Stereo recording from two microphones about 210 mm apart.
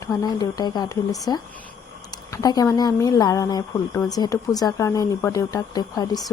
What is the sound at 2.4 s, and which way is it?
A woman's voice, 15° left (ahead or behind).